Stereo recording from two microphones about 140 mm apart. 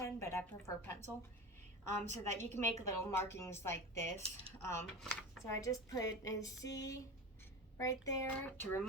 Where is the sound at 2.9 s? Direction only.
20° left (ahead or behind).